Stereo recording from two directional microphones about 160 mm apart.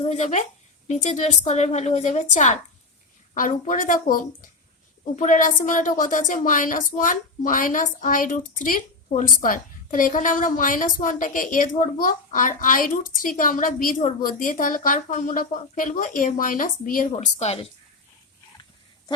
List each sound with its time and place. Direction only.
0.0 s speech: 45° left (ahead or behind); by 17.2 s 60° left (ahead or behind)
17.4 s a woman's voice: 40° left (ahead or behind)